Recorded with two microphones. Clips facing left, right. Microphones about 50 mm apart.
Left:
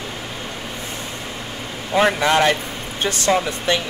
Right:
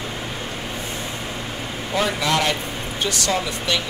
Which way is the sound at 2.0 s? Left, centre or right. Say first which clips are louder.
Left 5 dB; left.